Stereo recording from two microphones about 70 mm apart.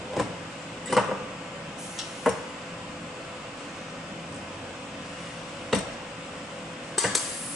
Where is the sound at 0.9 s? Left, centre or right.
Centre.